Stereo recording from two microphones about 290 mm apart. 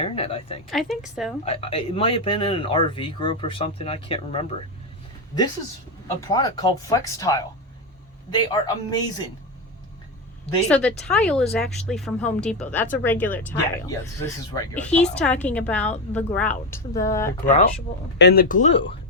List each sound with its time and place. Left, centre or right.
0.0 s speech: centre
0.7 s a woman's voice: centre
1.5 s speech: centre
6.1 s a woman's voice: centre
10.7 s a woman's voice: centre
17.4 s speech: left